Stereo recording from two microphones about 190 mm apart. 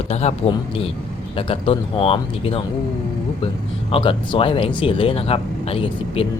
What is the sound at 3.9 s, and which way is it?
Speech, 25° left (ahead or behind).